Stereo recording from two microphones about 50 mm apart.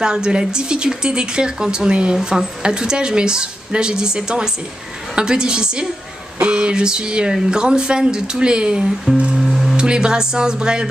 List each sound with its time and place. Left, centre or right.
0.0 s a woman's voice: centre
9.1 s music: right
9.4 s music: centre
9.8 s a woman's voice: centre